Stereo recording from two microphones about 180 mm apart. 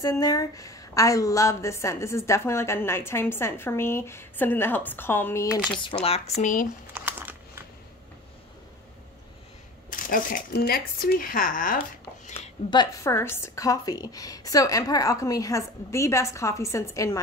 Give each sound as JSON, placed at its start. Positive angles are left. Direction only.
{"t": 0.0, "sound": "a woman's voice", "side_deg": 20}
{"t": 5.8, "sound": "speech", "side_deg": 30}
{"t": 6.4, "sound": "speech", "side_deg": 45}
{"t": 6.9, "sound": "crumpling", "side_deg": -10}
{"t": 9.8, "sound": "speech", "side_deg": 50}
{"t": 12.6, "sound": "a woman's voice", "side_deg": 20}